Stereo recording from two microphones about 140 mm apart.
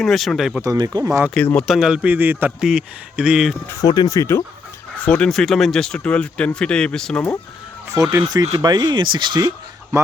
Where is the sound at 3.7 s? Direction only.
25° left (ahead or behind).